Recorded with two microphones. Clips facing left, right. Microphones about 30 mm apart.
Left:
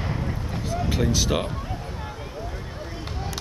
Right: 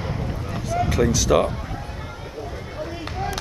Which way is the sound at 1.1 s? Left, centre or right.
Left.